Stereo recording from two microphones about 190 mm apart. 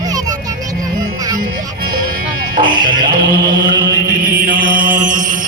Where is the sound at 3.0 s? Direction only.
25° right (ahead or behind).